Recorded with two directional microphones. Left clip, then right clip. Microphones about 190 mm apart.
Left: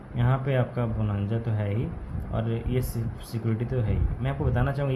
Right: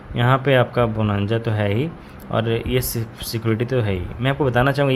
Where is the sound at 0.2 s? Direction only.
55° right (ahead or behind).